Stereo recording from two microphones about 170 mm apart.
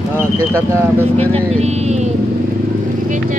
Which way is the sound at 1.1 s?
40° right (ahead or behind).